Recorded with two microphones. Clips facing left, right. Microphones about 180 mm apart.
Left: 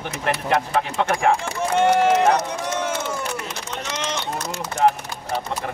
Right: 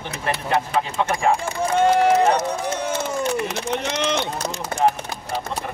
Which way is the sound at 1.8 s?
70° left (ahead or behind).